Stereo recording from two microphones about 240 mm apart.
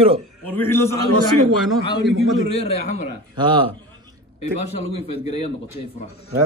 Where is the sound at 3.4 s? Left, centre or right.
Right.